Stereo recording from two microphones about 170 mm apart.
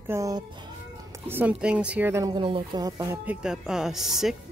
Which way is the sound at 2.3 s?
30° right (ahead or behind).